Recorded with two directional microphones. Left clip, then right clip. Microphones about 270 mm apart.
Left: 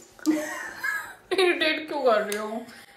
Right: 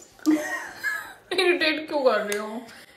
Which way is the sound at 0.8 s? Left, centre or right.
Centre.